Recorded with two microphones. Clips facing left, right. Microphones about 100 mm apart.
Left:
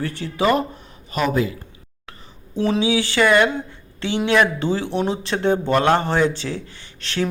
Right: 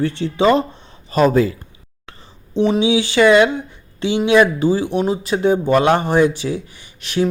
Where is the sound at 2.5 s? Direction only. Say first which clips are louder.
Right 4 dB; 20° right (ahead or behind).